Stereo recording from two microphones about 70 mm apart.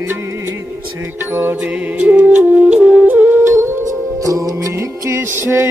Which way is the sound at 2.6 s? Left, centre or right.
Centre.